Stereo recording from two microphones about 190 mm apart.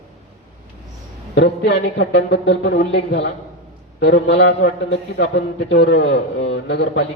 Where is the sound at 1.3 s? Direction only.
70° left (ahead or behind).